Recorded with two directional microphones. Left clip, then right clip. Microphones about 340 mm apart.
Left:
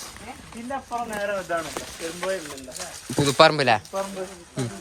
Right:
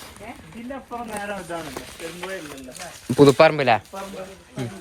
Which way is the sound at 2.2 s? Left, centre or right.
Left.